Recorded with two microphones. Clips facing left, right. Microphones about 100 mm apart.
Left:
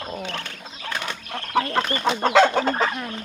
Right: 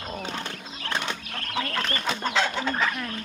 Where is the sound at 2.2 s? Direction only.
65° left (ahead or behind).